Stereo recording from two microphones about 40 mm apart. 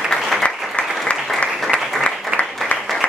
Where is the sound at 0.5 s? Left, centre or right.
Centre.